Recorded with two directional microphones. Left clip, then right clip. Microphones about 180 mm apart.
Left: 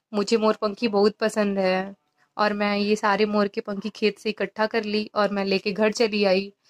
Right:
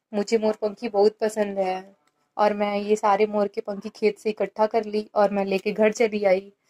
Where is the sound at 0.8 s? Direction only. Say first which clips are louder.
Right 1 dB; centre (ahead or behind).